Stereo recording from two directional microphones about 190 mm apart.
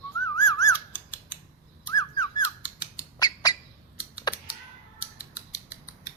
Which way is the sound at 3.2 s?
20° left (ahead or behind).